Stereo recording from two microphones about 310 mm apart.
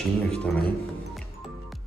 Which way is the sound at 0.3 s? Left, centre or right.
Centre.